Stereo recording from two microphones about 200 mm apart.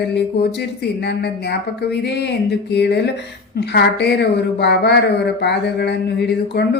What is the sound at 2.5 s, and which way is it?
Speech, 55° left (ahead or behind).